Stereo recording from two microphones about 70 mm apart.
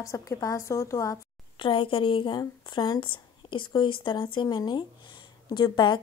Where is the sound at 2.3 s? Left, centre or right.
Left.